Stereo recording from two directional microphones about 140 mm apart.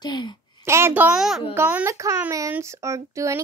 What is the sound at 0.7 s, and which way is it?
A child's voice, 20° right (ahead or behind).